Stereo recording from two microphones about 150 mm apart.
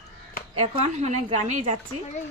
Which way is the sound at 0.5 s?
45° right (ahead or behind).